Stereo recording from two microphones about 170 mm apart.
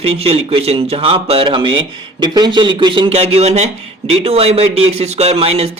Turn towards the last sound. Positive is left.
turn(degrees=-35)  # may be behind; listen again after turning